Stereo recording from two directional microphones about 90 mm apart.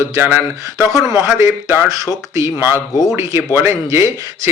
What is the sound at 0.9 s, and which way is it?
Speech, 40° right (ahead or behind).